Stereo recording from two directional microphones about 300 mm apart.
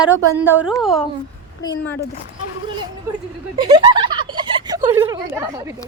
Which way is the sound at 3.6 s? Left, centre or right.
Centre.